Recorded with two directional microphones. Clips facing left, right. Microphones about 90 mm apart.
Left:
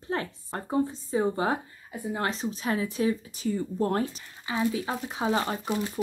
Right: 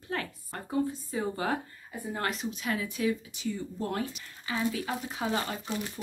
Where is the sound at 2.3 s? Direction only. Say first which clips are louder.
Left 2 dB; 35° left (ahead or behind).